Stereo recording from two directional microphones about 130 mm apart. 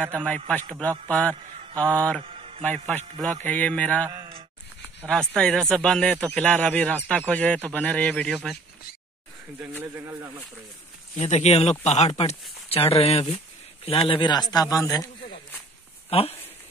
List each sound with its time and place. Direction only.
0.5 s a man's voice: 10° left (ahead or behind)
2.2 s mantra: 45° right (ahead or behind)
2.6 s a man's voice: 10° left (ahead or behind)
9.6 s speech: 15° right (ahead or behind)
11.1 s speech: 60° left (ahead or behind); by 15.0 s 25° left (ahead or behind)
16.1 s speech: 50° left (ahead or behind)